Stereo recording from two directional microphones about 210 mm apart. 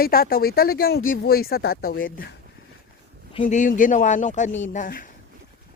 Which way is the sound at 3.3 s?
30° left (ahead or behind).